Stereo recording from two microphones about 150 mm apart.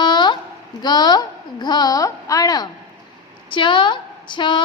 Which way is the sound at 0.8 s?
30° left (ahead or behind).